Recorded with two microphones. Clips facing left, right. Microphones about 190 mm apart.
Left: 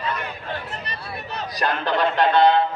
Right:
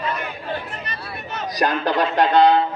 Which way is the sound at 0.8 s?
35° left (ahead or behind).